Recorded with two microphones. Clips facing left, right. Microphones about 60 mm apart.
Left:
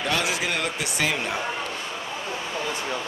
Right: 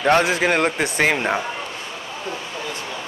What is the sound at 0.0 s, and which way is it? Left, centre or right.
Speech, right.